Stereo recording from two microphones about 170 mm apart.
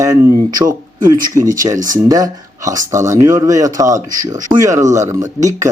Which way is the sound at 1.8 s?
20° right (ahead or behind).